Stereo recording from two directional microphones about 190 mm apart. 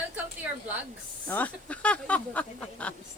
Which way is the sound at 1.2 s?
10° left (ahead or behind).